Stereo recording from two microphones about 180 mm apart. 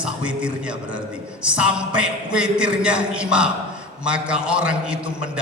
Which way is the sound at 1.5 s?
5° right (ahead or behind).